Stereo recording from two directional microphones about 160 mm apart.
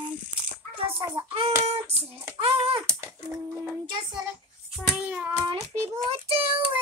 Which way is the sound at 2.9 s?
15° right (ahead or behind).